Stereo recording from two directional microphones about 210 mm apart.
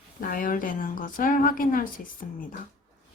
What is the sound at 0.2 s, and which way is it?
Speech, 40° left (ahead or behind).